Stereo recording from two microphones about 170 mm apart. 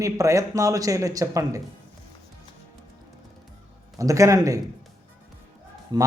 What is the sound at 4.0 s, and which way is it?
Speech, 20° right (ahead or behind).